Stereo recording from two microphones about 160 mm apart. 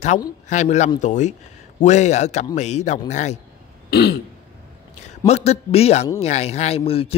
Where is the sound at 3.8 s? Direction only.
85° left.